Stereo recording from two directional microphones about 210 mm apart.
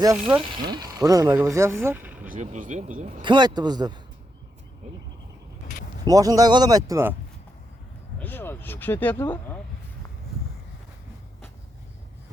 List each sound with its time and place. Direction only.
0.0 s speech: 15° right (ahead or behind)
2.3 s speech: 35° right (ahead or behind)
3.2 s speech: 20° right (ahead or behind)
6.1 s speech: 15° right (ahead or behind)
8.2 s speech: 10° left (ahead or behind)